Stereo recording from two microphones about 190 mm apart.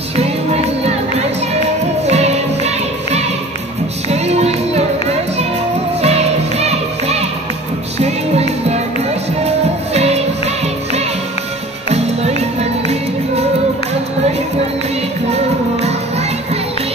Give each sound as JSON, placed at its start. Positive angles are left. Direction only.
{"t": 0.1, "sound": "music", "side_deg": -35}
{"t": 2.0, "sound": "music", "side_deg": -35}
{"t": 5.9, "sound": "music", "side_deg": -35}
{"t": 9.9, "sound": "music", "side_deg": -35}
{"t": 15.3, "sound": "music", "side_deg": -35}